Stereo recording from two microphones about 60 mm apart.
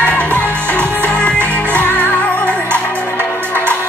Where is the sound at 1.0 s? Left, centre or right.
Left.